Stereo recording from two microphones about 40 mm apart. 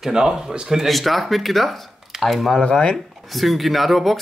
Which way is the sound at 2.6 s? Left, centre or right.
Left.